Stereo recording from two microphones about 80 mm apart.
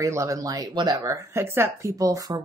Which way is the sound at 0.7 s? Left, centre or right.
Right.